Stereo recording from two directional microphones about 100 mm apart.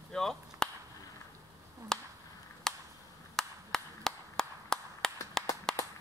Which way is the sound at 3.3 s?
5° left (ahead or behind).